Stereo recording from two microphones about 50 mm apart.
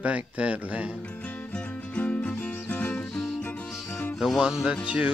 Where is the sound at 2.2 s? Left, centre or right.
Left.